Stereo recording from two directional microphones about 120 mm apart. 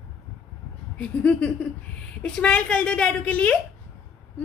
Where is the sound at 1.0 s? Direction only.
10° left (ahead or behind).